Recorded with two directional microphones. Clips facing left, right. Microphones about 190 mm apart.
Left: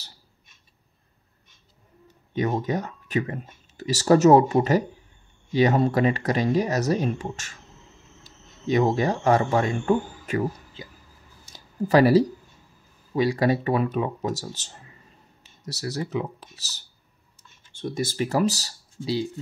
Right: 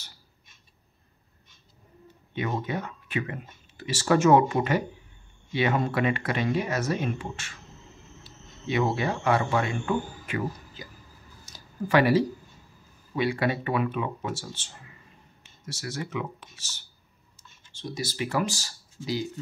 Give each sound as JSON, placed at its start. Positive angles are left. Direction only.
{"t": 2.3, "sound": "speech", "side_deg": 40}
{"t": 10.8, "sound": "speech", "side_deg": 25}
{"t": 11.9, "sound": "speech", "side_deg": 35}
{"t": 17.7, "sound": "speech", "side_deg": 55}